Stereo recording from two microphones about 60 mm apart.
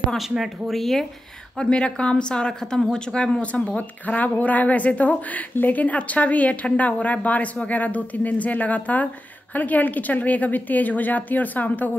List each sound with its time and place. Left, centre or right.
0.4 s speech: centre
1.6 s a woman's voice: centre